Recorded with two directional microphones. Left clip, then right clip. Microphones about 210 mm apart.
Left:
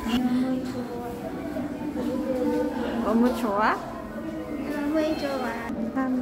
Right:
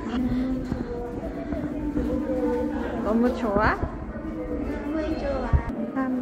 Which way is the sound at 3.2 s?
10° left (ahead or behind).